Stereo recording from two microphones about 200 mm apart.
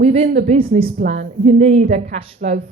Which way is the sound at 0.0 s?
30° right (ahead or behind).